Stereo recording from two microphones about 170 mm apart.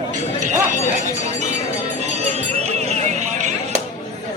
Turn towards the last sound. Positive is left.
turn(degrees=-45)  # may be behind; listen again after turning